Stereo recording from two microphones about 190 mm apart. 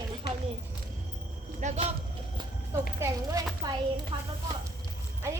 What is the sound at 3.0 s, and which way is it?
Speech, 20° right (ahead or behind).